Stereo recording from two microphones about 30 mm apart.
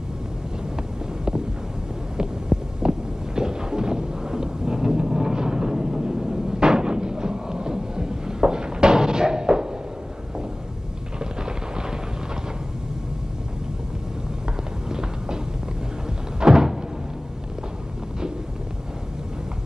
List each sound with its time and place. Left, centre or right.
2.1 s heart sounds: right
11.1 s a sound: right
14.9 s run: right
16.3 s door: right